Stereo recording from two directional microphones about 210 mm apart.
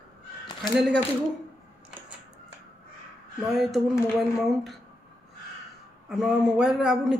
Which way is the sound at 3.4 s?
Centre (ahead or behind).